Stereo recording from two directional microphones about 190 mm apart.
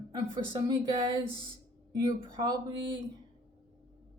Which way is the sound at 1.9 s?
20° right (ahead or behind).